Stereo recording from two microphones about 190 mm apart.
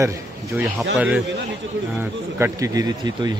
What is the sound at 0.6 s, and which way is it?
A man's voice, 10° right (ahead or behind).